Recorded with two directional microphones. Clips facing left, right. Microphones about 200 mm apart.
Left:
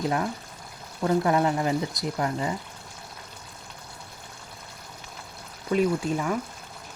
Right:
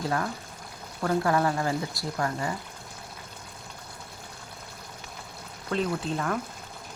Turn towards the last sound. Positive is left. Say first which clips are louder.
# left 3 dB
turn(degrees=10)  # may be behind; listen again after turning